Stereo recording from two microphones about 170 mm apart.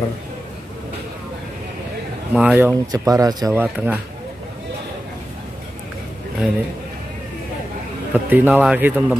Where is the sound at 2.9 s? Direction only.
20° right (ahead or behind).